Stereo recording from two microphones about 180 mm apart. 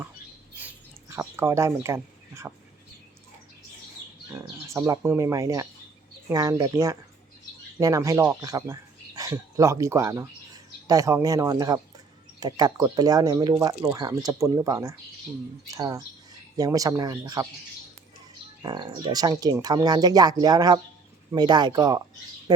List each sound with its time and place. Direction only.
0.6 s a sound: 10° right (ahead or behind)
4.3 s speech: 15° right (ahead or behind)
18.6 s speech: 25° right (ahead or behind)
22.5 s bird: 20° right (ahead or behind)